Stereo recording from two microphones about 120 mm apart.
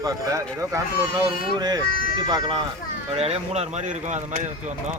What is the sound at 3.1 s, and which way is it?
Speech, 60° right (ahead or behind).